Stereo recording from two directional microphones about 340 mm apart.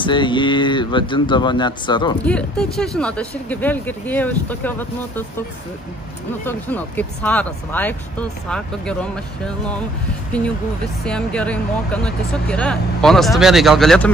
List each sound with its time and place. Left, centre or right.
0.0 s speech: centre
6.4 s speech: centre
11.1 s speech: centre